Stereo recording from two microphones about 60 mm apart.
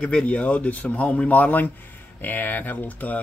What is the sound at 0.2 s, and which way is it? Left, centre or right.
Speech, left.